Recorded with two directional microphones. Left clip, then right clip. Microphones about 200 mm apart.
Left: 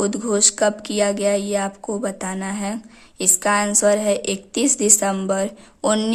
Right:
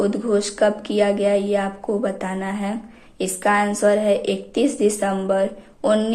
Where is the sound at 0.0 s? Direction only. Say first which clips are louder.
Even; 40° left (ahead or behind).